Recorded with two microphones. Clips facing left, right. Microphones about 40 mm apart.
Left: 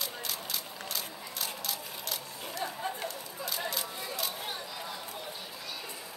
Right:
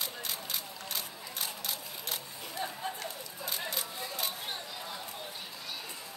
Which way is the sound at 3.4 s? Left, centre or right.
Right.